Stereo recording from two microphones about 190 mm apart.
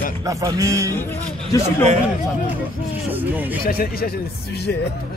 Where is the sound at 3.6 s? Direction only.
50° left (ahead or behind).